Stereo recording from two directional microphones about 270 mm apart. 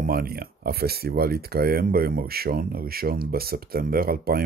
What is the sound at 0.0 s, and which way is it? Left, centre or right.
Speech, right.